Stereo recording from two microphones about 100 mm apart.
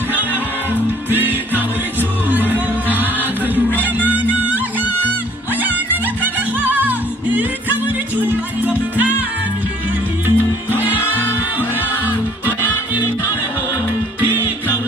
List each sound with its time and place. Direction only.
1.1 s music: 20° right (ahead or behind)
10.2 s music: 20° right (ahead or behind)
14.3 s music: 20° right (ahead or behind)